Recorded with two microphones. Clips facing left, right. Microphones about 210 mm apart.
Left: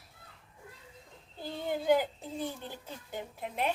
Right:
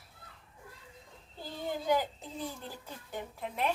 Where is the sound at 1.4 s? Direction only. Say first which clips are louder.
Left 3 dB; 55° left (ahead or behind).